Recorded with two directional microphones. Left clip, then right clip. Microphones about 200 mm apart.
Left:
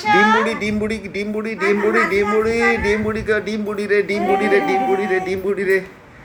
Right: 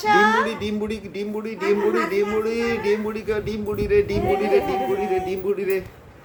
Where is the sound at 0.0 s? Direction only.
15° right (ahead or behind).